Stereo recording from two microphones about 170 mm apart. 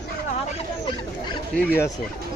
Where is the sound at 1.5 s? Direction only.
10° left (ahead or behind).